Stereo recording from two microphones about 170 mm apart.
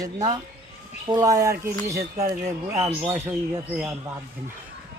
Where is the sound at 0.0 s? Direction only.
25° right (ahead or behind).